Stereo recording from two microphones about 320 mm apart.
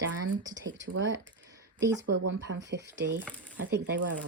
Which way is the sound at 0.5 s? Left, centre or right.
Right.